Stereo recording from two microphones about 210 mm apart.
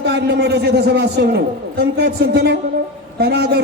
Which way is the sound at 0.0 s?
50° right (ahead or behind).